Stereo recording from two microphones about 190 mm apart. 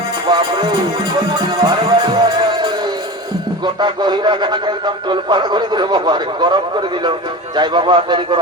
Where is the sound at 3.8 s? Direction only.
25° right (ahead or behind).